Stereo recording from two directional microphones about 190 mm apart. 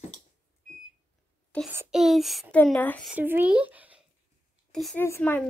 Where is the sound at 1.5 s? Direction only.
5° left (ahead or behind).